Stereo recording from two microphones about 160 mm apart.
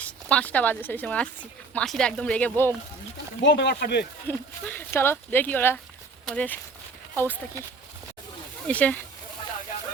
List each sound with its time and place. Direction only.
0.0 s speech: 10° left (ahead or behind)
3.5 s speech: 90° left
4.3 s speech: 10° left (ahead or behind)
8.6 s speech: 10° left (ahead or behind)